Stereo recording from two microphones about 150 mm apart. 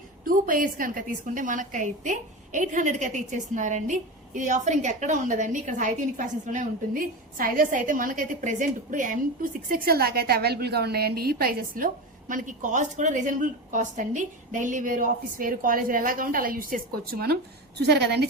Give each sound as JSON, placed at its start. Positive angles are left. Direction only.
{"t": 0.3, "sound": "a woman's voice", "side_deg": -70}
{"t": 12.3, "sound": "a woman's voice", "side_deg": -60}